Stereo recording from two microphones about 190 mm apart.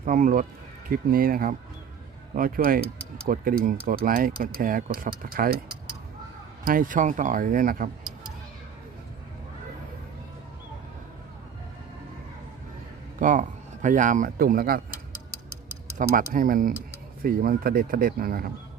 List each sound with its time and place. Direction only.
0.0 s speech: 45° right (ahead or behind)
6.7 s speech: 45° right (ahead or behind)
13.1 s speech: 45° right (ahead or behind)
16.0 s speech: 45° right (ahead or behind)